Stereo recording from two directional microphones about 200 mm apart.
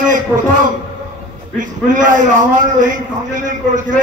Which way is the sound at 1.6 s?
40° right (ahead or behind).